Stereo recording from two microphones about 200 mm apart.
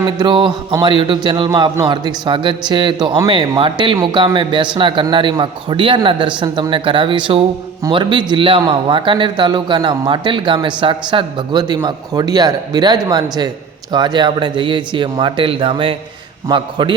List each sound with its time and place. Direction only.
0.2 s a man's voice: 25° right (ahead or behind)